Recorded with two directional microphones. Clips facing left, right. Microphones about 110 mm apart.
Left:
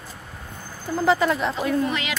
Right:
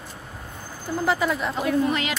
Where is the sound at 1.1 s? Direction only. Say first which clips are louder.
Left 4 dB; 5° right (ahead or behind).